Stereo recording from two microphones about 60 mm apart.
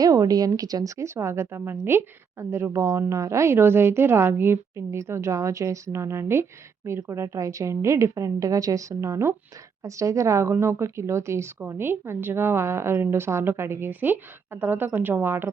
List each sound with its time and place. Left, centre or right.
0.0 s speech: right
0.9 s a woman's voice: right
2.7 s a woman's voice: right
7.3 s a woman's voice: right